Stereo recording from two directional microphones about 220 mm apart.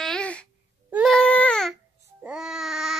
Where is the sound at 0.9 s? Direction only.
Centre (ahead or behind).